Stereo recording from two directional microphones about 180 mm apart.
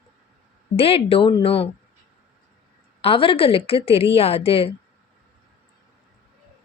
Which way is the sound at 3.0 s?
30° left (ahead or behind).